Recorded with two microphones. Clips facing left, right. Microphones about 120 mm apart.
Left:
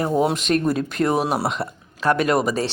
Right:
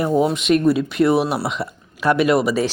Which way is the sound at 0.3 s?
35° left (ahead or behind).